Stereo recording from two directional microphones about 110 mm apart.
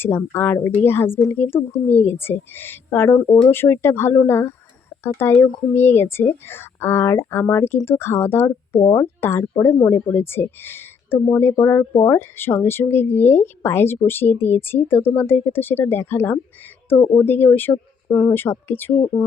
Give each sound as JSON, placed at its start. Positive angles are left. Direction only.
{"t": 0.3, "sound": "speech", "side_deg": 20}
{"t": 3.2, "sound": "speech", "side_deg": 5}
{"t": 3.5, "sound": "speech", "side_deg": 20}